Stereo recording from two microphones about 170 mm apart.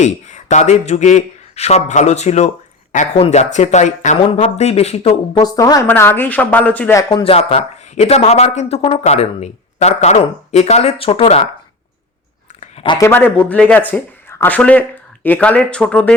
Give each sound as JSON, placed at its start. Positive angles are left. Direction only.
{"t": 0.0, "sound": "speech", "side_deg": 45}
{"t": 5.4, "sound": "a woman's voice", "side_deg": 25}
{"t": 7.1, "sound": "speech", "side_deg": 30}
{"t": 12.5, "sound": "a sound", "side_deg": 35}
{"t": 13.0, "sound": "speech", "side_deg": 10}